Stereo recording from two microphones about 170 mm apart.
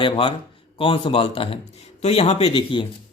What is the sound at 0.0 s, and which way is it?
Speech, 30° left (ahead or behind).